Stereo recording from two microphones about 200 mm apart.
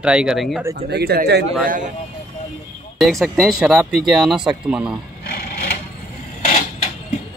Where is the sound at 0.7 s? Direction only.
50° right (ahead or behind).